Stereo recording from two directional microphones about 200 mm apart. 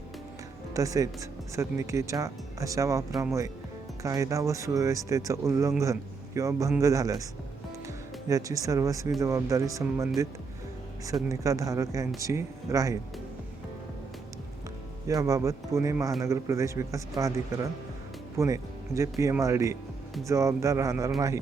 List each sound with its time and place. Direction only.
0.7 s speech: 15° right (ahead or behind)
8.3 s speech: 15° right (ahead or behind)
15.0 s speech: 15° right (ahead or behind)
18.3 s speech: 15° right (ahead or behind)